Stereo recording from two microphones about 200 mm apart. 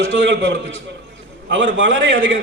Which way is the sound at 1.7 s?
70° right (ahead or behind).